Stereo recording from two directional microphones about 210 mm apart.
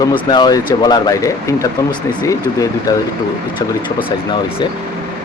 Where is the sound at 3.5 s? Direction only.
25° left (ahead or behind).